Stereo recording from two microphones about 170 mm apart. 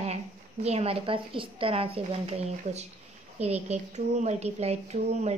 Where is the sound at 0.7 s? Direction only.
35° right (ahead or behind).